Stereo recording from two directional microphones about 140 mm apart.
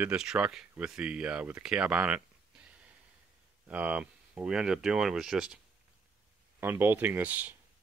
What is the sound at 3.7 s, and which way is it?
Speech, 10° right (ahead or behind).